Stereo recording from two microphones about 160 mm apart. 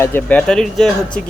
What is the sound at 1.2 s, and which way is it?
Speech, 55° left (ahead or behind).